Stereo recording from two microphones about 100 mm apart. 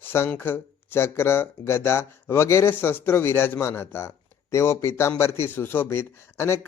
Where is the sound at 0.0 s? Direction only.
25° left (ahead or behind).